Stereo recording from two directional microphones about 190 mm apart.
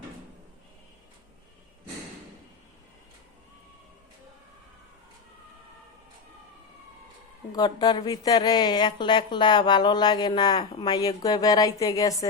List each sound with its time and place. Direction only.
7.5 s speech: 20° left (ahead or behind)